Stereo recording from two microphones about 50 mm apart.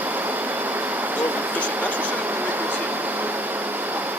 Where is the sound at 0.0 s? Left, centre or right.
Right.